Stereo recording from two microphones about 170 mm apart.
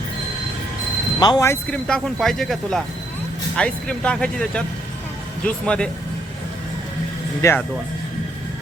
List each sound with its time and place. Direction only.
1.2 s speech: 20° left (ahead or behind)
1.7 s speech: 5° left (ahead or behind)
7.4 s speech: 15° left (ahead or behind)